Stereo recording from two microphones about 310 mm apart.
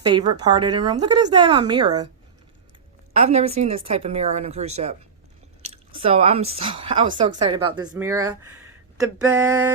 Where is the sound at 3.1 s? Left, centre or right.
Right.